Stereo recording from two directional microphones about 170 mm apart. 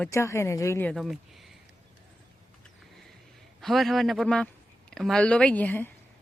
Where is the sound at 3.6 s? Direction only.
Centre (ahead or behind).